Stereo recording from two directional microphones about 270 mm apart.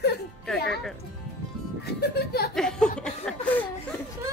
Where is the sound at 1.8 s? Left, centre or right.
Left.